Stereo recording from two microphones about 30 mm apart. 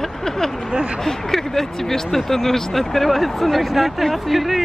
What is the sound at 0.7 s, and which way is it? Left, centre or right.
Speech, right.